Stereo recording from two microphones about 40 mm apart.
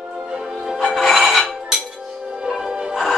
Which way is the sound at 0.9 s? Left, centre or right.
Centre.